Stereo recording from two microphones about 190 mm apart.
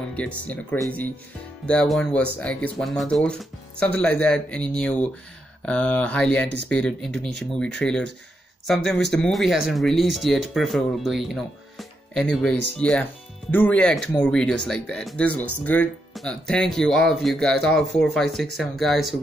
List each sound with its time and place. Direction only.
0.1 s speech: 5° left (ahead or behind)